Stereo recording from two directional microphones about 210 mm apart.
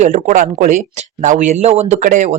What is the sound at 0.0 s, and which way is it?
A man's voice, 35° right (ahead or behind).